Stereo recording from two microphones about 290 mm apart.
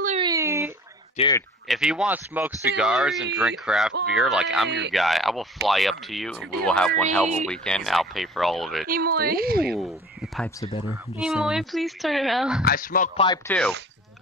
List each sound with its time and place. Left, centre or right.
0.0 s a sound: centre
1.1 s speech: centre
1.7 s speech: centre
4.6 s a woman's voice: right
4.9 s speech: centre
6.9 s speech: right
7.4 s speech: centre
8.8 s a woman's voice: right
9.7 s speech: centre
12.6 s speech: left
13.5 s speech: centre